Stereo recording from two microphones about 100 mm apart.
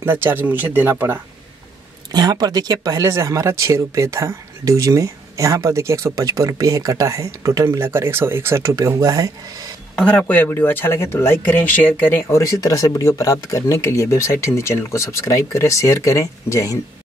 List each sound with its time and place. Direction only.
0.0 s speech: 20° right (ahead or behind)
2.1 s speech: 45° right (ahead or behind)
9.9 s speech: 10° left (ahead or behind); by 16.7 s 30° left (ahead or behind)